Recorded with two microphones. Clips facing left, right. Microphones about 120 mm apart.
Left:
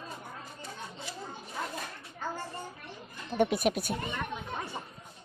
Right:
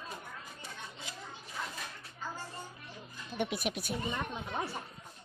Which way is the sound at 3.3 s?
50° left (ahead or behind).